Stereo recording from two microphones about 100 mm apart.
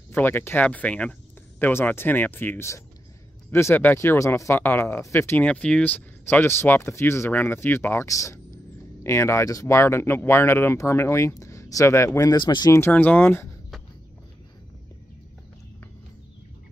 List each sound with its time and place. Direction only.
0.1 s speech: 20° left (ahead or behind)
0.7 s speech: 10° left (ahead or behind); by 5.4 s 25° left (ahead or behind)
5.4 s speech: 10° left (ahead or behind)
6.2 s speech: 25° left (ahead or behind)
12.3 s speech: 45° left (ahead or behind)
12.9 s speech: 15° left (ahead or behind)